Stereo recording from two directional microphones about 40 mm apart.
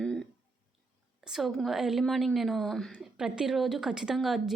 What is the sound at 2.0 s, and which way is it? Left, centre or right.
Speech, centre.